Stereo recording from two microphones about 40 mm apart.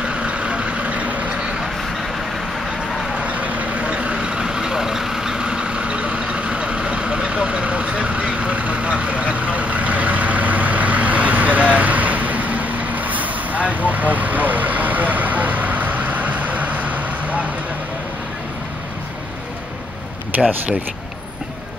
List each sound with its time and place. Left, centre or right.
0.0 s vehicle: right
3.2 s vehicle: right
20.3 s a sound: right